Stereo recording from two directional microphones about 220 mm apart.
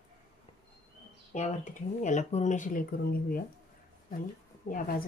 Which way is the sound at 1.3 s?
35° left (ahead or behind).